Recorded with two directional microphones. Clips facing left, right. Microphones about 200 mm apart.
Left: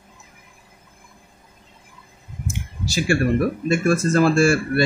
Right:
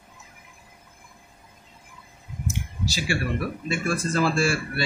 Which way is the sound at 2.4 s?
50° left (ahead or behind).